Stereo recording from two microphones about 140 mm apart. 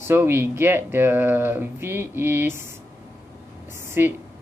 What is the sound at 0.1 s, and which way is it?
Speech, 15° right (ahead or behind).